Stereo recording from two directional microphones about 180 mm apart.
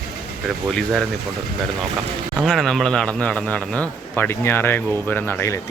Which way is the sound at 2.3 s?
Centre (ahead or behind).